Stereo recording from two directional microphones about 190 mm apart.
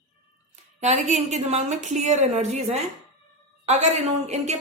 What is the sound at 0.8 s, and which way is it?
A woman's voice, 40° right (ahead or behind).